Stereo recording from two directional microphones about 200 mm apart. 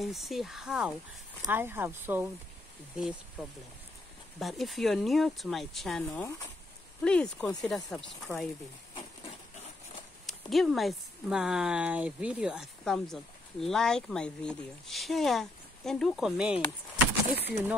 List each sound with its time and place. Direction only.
0.0 s speech: centre (ahead or behind)
10.2 s speech: centre (ahead or behind)
17.3 s speech: 55° right (ahead or behind)